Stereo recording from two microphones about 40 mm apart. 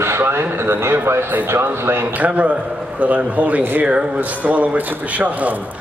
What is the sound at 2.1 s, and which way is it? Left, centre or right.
Speech, right.